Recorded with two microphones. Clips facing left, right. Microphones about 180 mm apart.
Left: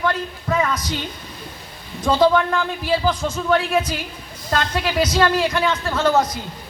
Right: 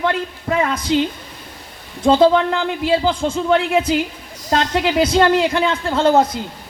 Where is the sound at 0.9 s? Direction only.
90° right.